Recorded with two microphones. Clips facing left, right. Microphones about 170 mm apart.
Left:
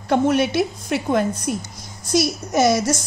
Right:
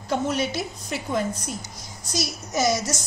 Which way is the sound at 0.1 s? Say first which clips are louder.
Left 7 dB; 60° left (ahead or behind).